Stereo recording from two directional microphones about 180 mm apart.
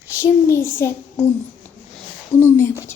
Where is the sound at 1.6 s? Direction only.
10° left (ahead or behind).